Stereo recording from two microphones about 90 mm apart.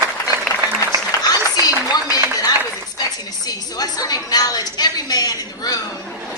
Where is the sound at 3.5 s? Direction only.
45° left (ahead or behind).